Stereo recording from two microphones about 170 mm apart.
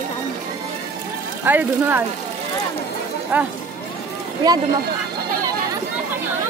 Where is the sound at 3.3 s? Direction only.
10° right (ahead or behind).